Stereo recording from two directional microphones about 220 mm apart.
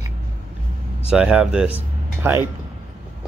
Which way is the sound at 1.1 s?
5° right (ahead or behind).